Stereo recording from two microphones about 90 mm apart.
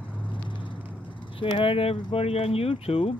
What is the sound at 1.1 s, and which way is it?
Speech, 75° left (ahead or behind).